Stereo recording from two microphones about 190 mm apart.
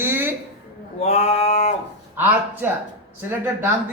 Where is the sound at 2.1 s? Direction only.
10° right (ahead or behind).